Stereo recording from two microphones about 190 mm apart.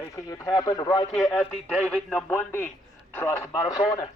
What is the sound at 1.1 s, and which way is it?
A man's voice, 5° left (ahead or behind).